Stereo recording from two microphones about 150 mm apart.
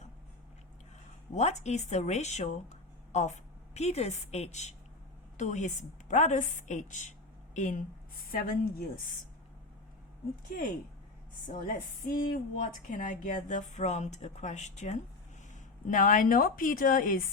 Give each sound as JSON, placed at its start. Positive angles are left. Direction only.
{"t": 1.3, "sound": "a woman's voice", "side_deg": 50}
{"t": 11.6, "sound": "speech", "side_deg": 70}
{"t": 15.9, "sound": "speech", "side_deg": 60}